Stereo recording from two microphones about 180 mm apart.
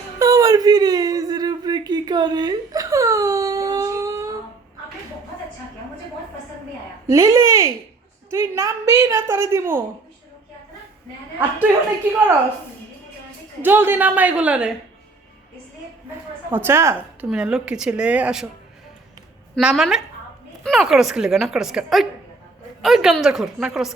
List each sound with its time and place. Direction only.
0.2 s a sound: 20° right (ahead or behind)
7.1 s a sound: 15° right (ahead or behind)
8.3 s a woman's voice: 15° right (ahead or behind)
13.6 s a woman's voice: 10° right (ahead or behind)
16.5 s a woman's voice: 10° right (ahead or behind)
19.5 s speech: centre (ahead or behind)